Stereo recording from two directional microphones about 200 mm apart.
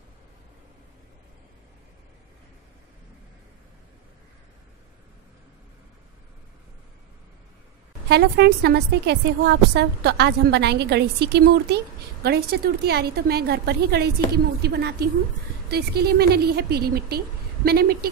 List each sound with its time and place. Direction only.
8.1 s a woman's voice: 55° right (ahead or behind)